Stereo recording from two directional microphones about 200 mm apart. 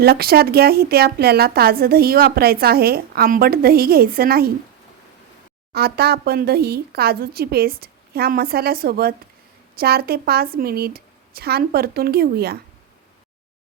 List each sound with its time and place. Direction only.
0.0 s a woman's voice: 50° right (ahead or behind)
5.7 s a woman's voice: 50° right (ahead or behind)